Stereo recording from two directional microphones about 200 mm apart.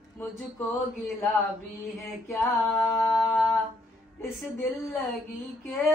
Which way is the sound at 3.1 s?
Centre (ahead or behind).